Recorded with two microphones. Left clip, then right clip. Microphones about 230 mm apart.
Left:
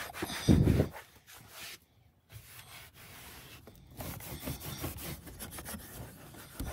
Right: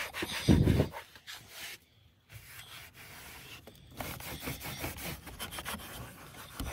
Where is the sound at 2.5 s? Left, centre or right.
Centre.